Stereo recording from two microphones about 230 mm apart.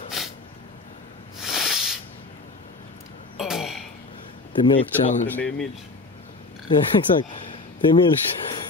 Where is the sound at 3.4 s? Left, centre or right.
Centre.